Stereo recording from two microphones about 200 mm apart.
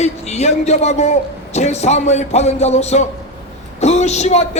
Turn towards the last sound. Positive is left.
turn(degrees=35)  # may be behind; listen again after turning